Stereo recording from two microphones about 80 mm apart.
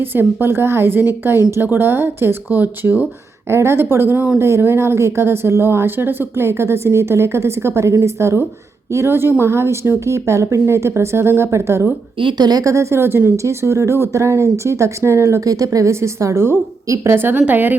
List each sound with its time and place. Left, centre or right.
0.0 s speech: right
12.2 s speech: right